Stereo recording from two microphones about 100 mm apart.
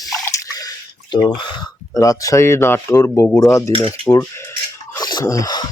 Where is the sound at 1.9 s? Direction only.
35° left (ahead or behind).